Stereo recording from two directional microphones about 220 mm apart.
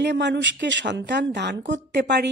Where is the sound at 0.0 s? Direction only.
50° right (ahead or behind).